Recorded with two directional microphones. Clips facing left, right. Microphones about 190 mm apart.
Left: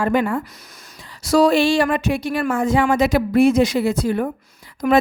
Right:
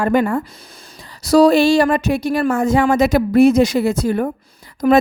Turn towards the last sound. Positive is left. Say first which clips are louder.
# right 4 dB
turn(degrees=-35)  # may be behind; listen again after turning